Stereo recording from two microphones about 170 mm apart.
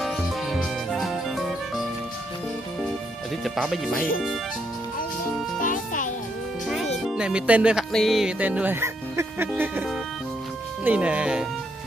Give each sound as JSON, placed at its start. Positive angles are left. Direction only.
{"t": 0.0, "sound": "music", "side_deg": 0}
{"t": 3.4, "sound": "speech", "side_deg": 0}
{"t": 5.6, "sound": "music", "side_deg": 50}
{"t": 7.1, "sound": "speech", "side_deg": -5}
{"t": 10.8, "sound": "speech", "side_deg": -10}